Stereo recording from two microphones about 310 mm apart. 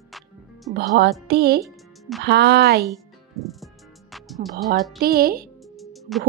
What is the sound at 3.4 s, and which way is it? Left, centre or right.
Music, centre.